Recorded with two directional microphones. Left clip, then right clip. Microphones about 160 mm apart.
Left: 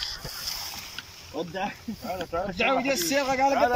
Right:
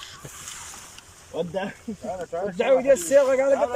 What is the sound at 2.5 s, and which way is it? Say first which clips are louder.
Speech: right 7 dB; 30° right (ahead or behind).